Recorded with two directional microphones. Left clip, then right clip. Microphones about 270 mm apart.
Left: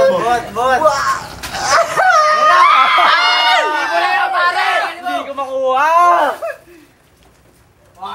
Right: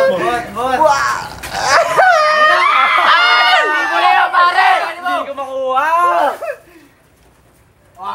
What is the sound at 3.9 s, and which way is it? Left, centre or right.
Chatter, centre.